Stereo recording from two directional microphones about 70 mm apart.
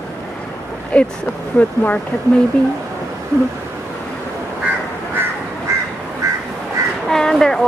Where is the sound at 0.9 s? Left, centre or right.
Centre.